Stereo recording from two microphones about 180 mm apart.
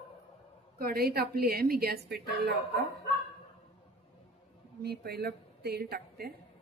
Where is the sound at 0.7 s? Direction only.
55° right (ahead or behind).